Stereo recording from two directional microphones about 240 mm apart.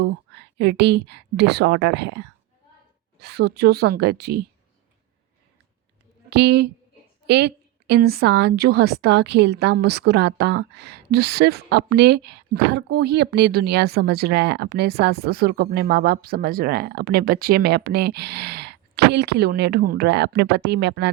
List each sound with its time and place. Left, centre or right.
0.0 s a woman's voice: right
6.3 s a woman's voice: right